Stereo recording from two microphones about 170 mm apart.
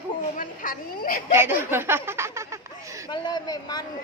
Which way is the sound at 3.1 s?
25° left (ahead or behind).